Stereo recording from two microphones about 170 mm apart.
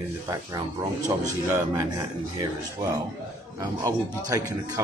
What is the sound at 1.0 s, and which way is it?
A man's voice, 20° right (ahead or behind).